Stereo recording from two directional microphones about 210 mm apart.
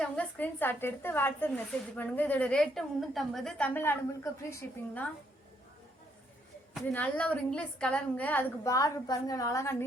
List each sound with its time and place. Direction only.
0.0 s a woman's voice: 5° left (ahead or behind)
6.7 s a woman's voice: 5° left (ahead or behind)